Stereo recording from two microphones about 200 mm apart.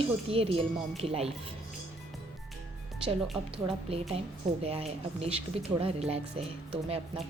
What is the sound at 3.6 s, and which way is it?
Speech, 30° right (ahead or behind).